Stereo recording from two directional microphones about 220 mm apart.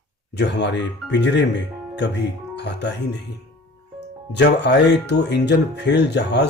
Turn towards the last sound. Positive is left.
turn(degrees=50)  # may be behind; listen again after turning